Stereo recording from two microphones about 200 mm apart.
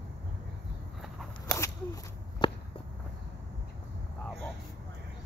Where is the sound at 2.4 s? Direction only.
20° left (ahead or behind).